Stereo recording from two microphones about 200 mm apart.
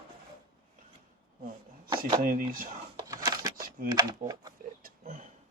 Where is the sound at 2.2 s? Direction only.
45° right (ahead or behind).